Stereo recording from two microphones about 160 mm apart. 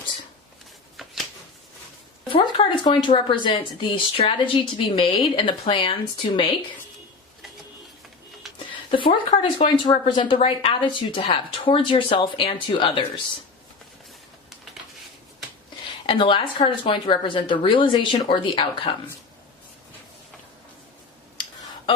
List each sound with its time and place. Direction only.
0.9 s a sound: centre (ahead or behind)
2.2 s a woman's voice: 30° left (ahead or behind)
8.5 s speech: 35° left (ahead or behind)
16.0 s speech: 35° left (ahead or behind)